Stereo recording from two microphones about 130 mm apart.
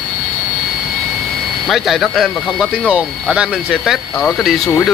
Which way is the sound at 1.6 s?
Centre (ahead or behind).